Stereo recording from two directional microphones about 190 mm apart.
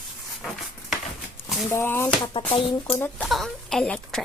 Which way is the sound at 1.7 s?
10° left (ahead or behind).